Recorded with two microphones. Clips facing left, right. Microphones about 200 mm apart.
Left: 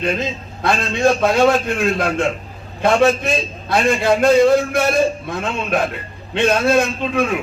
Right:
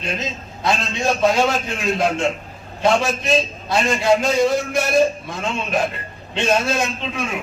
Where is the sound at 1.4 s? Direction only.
55° left (ahead or behind).